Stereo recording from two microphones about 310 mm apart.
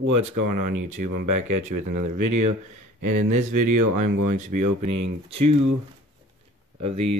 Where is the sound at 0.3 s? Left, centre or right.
Right.